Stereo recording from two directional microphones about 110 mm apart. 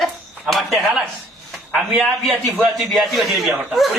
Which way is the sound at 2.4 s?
Centre (ahead or behind).